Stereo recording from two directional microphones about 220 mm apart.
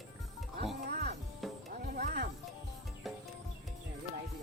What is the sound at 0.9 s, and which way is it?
Music, 50° right (ahead or behind).